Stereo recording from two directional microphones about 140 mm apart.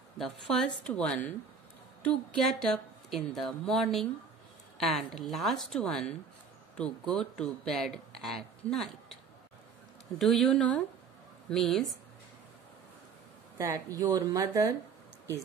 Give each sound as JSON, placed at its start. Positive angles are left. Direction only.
{"t": 0.2, "sound": "a woman's voice", "side_deg": 5}
{"t": 13.6, "sound": "speech", "side_deg": -25}